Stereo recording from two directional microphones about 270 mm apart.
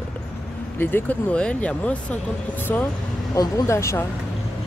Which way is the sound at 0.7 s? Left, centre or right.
Centre.